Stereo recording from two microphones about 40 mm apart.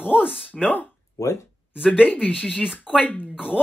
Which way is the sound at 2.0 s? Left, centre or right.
Left.